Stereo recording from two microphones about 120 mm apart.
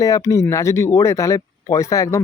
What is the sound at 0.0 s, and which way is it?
Speech, 25° left (ahead or behind).